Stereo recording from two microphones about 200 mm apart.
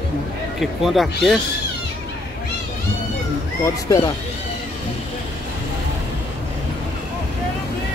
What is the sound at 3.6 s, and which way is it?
Speech, 15° left (ahead or behind).